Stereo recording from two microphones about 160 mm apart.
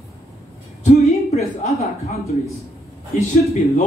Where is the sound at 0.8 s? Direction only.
45° left (ahead or behind).